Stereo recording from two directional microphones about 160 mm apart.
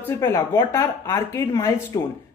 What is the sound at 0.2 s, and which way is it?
A woman's voice, 15° left (ahead or behind).